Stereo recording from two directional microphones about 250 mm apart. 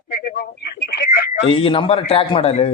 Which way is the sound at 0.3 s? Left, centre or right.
Left.